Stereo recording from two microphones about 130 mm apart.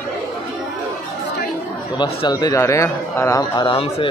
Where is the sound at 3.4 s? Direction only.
30° left (ahead or behind).